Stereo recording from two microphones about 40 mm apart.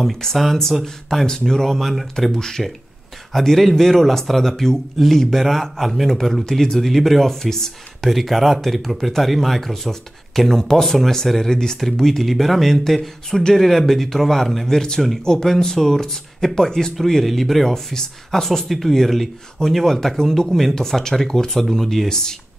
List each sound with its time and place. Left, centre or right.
0.0 s speech: centre
2.3 s speech: centre
8.1 s speech: centre
11.5 s speech: centre
20.4 s speech: centre
20.7 s speech: centre